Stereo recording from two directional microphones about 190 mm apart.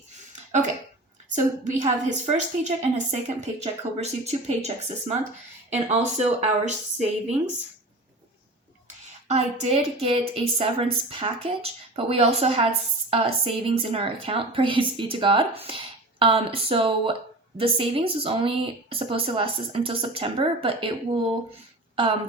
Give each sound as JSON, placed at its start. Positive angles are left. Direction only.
{"t": 1.6, "sound": "a woman's voice", "side_deg": -40}
{"t": 9.2, "sound": "a woman's voice", "side_deg": -35}